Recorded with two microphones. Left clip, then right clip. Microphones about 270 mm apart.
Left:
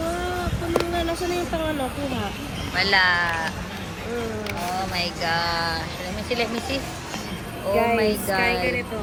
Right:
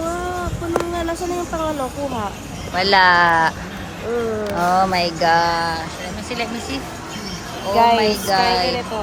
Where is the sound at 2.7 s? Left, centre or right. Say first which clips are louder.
Right 6 dB; centre.